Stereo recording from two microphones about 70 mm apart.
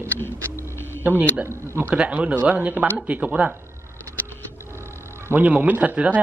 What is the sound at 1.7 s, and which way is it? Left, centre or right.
Speech, centre.